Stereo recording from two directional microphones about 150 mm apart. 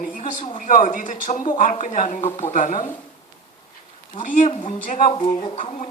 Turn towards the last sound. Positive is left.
turn(degrees=50)  # may be behind; listen again after turning